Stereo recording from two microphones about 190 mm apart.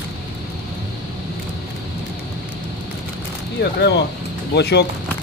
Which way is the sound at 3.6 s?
60° left (ahead or behind).